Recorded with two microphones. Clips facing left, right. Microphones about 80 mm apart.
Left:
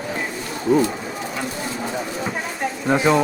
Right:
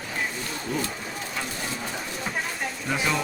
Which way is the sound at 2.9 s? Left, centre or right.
Left.